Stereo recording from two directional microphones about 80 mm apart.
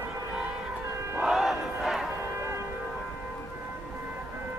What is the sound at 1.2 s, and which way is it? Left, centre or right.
Battle cry, centre.